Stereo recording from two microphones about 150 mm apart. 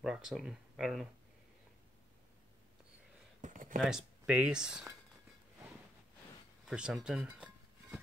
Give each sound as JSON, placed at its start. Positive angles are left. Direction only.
{"t": 0.0, "sound": "speech", "side_deg": -5}
{"t": 3.3, "sound": "a sound", "side_deg": -60}
{"t": 3.8, "sound": "speech", "side_deg": -5}
{"t": 6.6, "sound": "dishes", "side_deg": -5}